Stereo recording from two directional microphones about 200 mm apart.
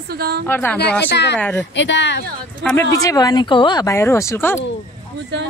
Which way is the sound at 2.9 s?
15° left (ahead or behind).